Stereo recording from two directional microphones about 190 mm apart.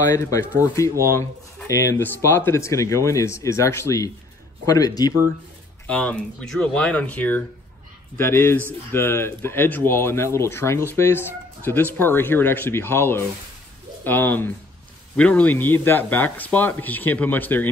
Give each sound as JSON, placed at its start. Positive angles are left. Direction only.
{"t": 0.1, "sound": "speech", "side_deg": 15}
{"t": 5.9, "sound": "speech", "side_deg": 5}